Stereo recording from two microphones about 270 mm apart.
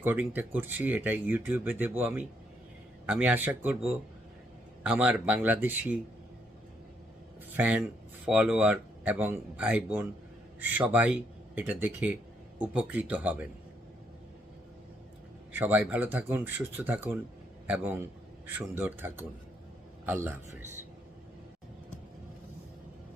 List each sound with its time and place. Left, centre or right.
0.0 s speech: centre
7.5 s speech: centre
15.5 s speech: centre